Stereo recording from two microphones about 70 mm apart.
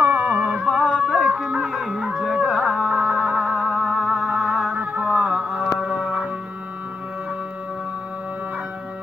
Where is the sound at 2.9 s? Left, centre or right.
Centre.